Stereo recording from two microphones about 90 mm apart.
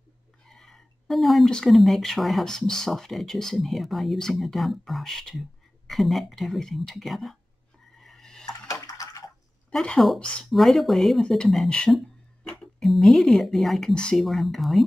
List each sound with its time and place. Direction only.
0.5 s speech: 5° left (ahead or behind)
8.0 s dishes: 5° left (ahead or behind)
8.8 s water: 40° left (ahead or behind)
9.7 s speech: 5° left (ahead or behind)